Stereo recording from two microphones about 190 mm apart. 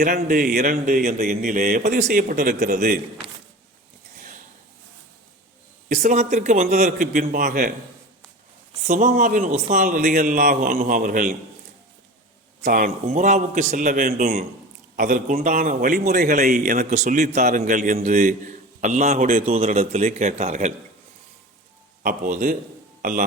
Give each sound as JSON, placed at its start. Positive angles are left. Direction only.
{"t": 0.0, "sound": "speech", "side_deg": -45}
{"t": 5.9, "sound": "a man's voice", "side_deg": -40}
{"t": 8.9, "sound": "speech", "side_deg": -40}
{"t": 12.6, "sound": "speech", "side_deg": -45}
{"t": 16.3, "sound": "a man's voice", "side_deg": -40}
{"t": 22.0, "sound": "speech", "side_deg": -45}